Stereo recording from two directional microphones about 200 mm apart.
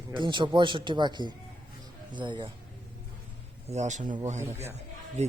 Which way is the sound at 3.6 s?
35° right (ahead or behind).